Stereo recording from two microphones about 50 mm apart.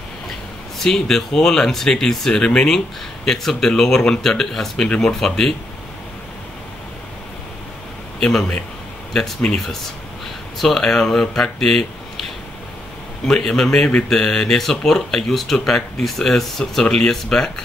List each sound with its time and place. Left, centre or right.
0.7 s speech: centre
4.8 s speech: left
5.2 s speech: centre
9.1 s speech: centre
10.6 s speech: centre
13.2 s speech: centre